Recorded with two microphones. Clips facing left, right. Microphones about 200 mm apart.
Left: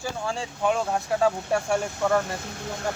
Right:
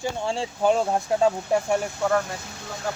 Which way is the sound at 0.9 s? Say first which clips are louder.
Right 2 dB; 20° right (ahead or behind).